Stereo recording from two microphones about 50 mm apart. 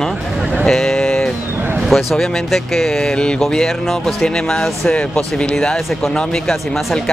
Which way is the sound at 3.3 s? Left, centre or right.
Centre.